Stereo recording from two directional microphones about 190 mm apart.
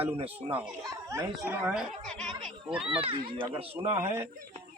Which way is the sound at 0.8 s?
15° right (ahead or behind).